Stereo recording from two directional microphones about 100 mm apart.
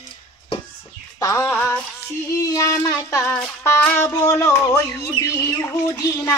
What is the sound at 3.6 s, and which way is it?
Speech, 20° left (ahead or behind).